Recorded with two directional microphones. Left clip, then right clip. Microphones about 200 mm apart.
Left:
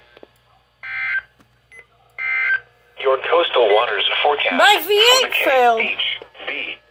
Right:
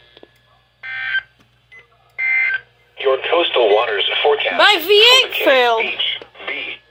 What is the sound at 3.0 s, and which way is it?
Radio, 50° left (ahead or behind).